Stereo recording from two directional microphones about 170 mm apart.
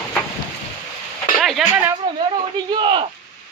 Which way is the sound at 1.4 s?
5° right (ahead or behind).